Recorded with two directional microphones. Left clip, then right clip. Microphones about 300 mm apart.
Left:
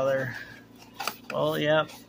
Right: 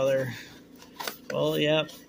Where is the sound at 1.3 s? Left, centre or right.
Centre.